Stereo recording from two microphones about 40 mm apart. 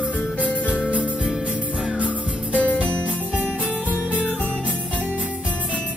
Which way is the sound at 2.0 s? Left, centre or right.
Right.